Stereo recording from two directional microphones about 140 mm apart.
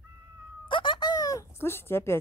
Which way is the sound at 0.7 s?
35° left (ahead or behind).